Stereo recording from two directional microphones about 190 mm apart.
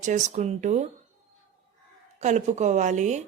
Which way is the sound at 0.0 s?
40° right (ahead or behind).